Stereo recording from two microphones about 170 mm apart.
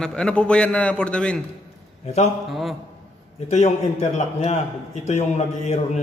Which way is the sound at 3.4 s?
40° left (ahead or behind).